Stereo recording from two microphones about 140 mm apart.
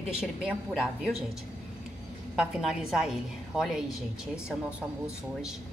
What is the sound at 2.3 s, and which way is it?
A woman's voice, 5° right (ahead or behind).